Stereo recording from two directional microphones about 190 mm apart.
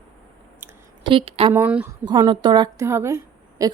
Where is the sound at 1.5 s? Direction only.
10° right (ahead or behind).